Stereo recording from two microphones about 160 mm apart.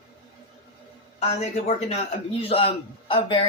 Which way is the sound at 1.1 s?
40° left (ahead or behind).